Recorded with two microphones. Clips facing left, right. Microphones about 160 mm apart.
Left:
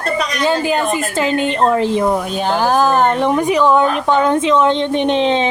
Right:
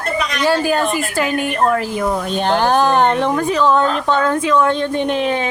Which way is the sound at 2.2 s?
5° left (ahead or behind).